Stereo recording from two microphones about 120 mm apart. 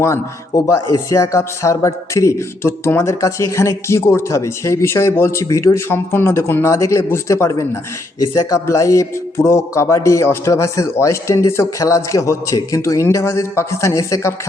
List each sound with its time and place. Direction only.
0.0 s speech: 25° left (ahead or behind)